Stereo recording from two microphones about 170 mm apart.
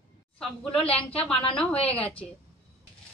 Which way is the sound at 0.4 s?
5° left (ahead or behind).